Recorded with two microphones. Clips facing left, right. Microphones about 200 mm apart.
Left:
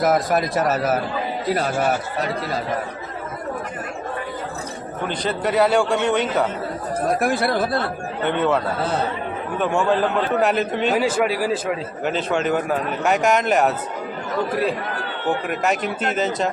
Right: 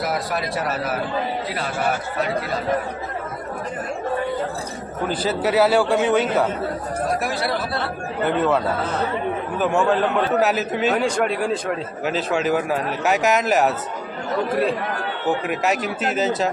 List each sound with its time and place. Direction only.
0.0 s a man's voice: 45° left (ahead or behind)
5.0 s a man's voice: 5° right (ahead or behind)
7.2 s a man's voice: 50° left (ahead or behind)
8.2 s a man's voice: centre (ahead or behind)